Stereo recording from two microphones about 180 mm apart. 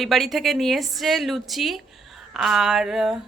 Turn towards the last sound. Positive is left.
turn(degrees=0)  # may be behind; listen again after turning